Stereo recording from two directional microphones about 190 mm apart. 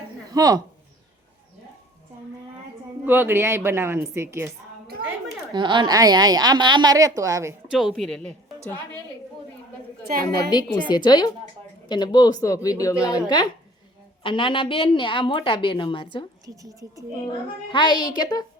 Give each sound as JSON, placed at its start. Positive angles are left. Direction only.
{"t": 0.3, "sound": "speech", "side_deg": -20}
{"t": 3.1, "sound": "a woman's voice", "side_deg": -10}
{"t": 5.5, "sound": "a woman's voice", "side_deg": -25}
{"t": 7.7, "sound": "a woman's voice", "side_deg": 0}
{"t": 10.0, "sound": "a woman's voice", "side_deg": -55}
{"t": 10.3, "sound": "a woman's voice", "side_deg": 20}
{"t": 17.7, "sound": "a woman's voice", "side_deg": 25}